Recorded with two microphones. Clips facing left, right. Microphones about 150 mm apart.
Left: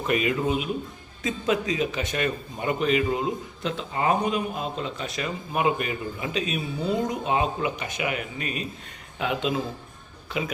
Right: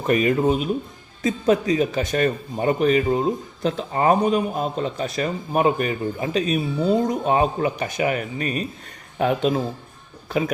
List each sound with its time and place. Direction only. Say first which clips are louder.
0.1 s speech: right 6 dB; 40° right (ahead or behind)
1.7 s speech: right 6 dB; 40° right (ahead or behind)